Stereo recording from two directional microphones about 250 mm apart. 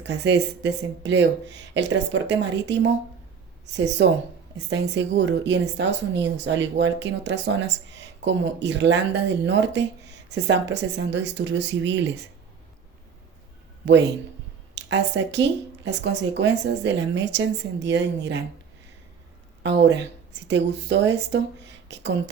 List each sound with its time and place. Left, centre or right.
0.0 s speech: right
13.8 s speech: right
20.5 s speech: right
21.9 s a sound: right